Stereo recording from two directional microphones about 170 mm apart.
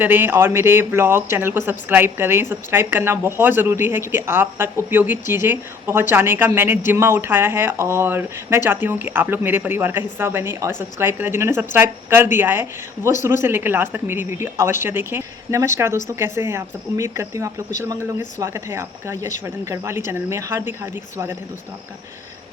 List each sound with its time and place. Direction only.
0.0 s speech: 10° right (ahead or behind)